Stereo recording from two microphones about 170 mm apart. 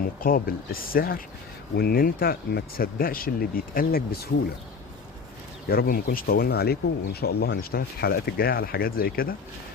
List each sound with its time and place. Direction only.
0.2 s speech: 55° left (ahead or behind)
5.6 s speech: 60° left (ahead or behind)